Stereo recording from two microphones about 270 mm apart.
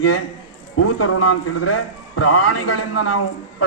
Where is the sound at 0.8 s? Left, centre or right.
Left.